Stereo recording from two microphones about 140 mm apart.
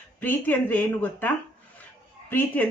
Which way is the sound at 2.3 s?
10° left (ahead or behind).